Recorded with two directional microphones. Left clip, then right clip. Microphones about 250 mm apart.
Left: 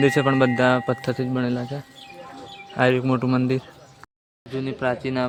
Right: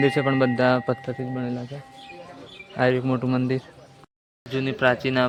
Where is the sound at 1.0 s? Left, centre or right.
Left.